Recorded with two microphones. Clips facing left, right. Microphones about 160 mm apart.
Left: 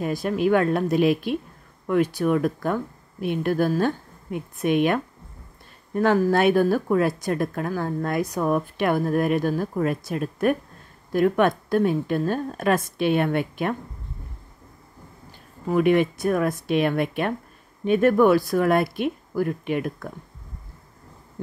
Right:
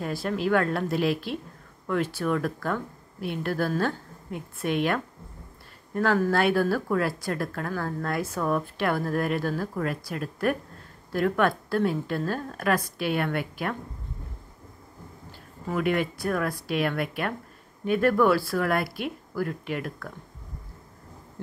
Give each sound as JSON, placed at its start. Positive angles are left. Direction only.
{"t": 0.0, "sound": "speech", "side_deg": 15}
{"t": 15.7, "sound": "speech", "side_deg": 20}